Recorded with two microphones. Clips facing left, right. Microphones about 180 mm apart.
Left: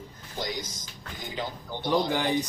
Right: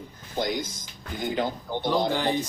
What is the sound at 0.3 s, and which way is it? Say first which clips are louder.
Speech: right 6 dB; 55° right (ahead or behind).